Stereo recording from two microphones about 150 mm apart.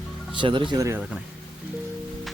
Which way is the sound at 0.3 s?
35° right (ahead or behind).